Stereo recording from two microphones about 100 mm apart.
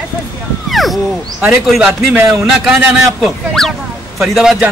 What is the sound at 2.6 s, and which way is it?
A man's voice, 5° right (ahead or behind).